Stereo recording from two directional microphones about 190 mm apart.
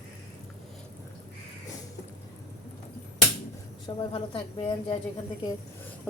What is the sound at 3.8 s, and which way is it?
A woman's voice, 25° left (ahead or behind).